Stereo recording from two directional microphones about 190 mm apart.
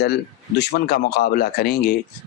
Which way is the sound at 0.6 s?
55° left (ahead or behind).